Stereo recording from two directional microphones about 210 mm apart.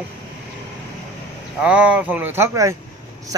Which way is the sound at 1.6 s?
5° right (ahead or behind).